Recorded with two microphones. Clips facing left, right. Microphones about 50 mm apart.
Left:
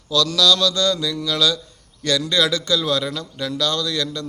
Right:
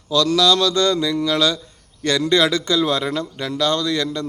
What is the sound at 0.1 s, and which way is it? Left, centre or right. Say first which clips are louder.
Speech: right 2 dB; right.